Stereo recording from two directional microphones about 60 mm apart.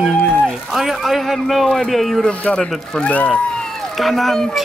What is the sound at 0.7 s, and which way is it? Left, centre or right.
Speech, centre.